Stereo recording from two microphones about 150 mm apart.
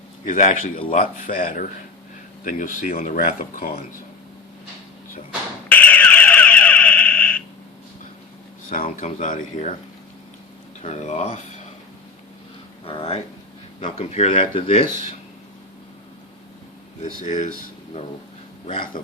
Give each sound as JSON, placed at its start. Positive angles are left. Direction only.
{"t": 0.3, "sound": "speech", "side_deg": 60}
{"t": 5.6, "sound": "a sound", "side_deg": 10}
{"t": 8.7, "sound": "speech", "side_deg": 60}
{"t": 10.8, "sound": "speech", "side_deg": 50}
{"t": 12.8, "sound": "speech", "side_deg": 40}
{"t": 17.0, "sound": "speech", "side_deg": 55}
{"t": 18.7, "sound": "speech", "side_deg": 35}